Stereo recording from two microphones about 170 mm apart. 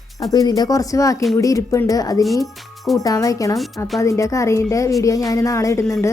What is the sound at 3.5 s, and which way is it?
Speech, centre (ahead or behind).